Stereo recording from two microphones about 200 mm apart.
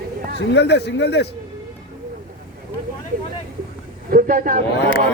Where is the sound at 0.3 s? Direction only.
60° left (ahead or behind).